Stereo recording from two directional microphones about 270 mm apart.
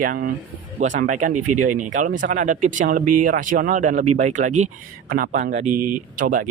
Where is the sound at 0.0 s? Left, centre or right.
Right.